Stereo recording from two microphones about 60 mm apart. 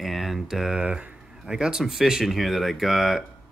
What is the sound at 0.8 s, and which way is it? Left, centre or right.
Speech, centre.